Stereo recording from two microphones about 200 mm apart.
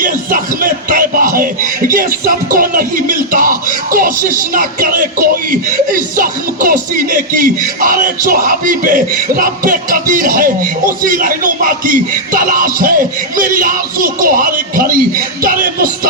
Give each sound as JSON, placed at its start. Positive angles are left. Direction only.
{"t": 0.0, "sound": "music", "side_deg": -45}
{"t": 1.9, "sound": "speech", "side_deg": -45}